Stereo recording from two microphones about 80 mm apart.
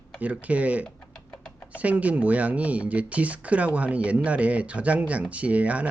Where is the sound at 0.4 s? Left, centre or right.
Centre.